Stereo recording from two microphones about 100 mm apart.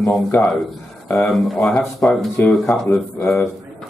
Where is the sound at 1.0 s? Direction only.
5° left (ahead or behind).